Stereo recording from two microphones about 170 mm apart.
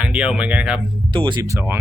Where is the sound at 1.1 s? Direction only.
25° right (ahead or behind).